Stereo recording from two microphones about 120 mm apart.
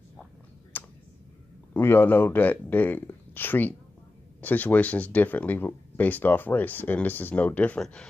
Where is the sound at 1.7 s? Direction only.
20° left (ahead or behind).